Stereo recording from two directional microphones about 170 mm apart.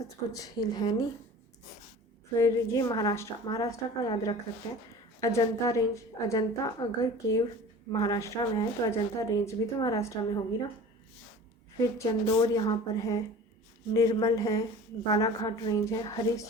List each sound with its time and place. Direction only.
0.3 s speech: 20° left (ahead or behind)
2.3 s speech: 20° left (ahead or behind)
11.8 s speech: 20° left (ahead or behind)